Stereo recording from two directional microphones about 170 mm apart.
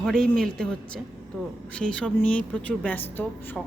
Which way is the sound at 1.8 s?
5° left (ahead or behind).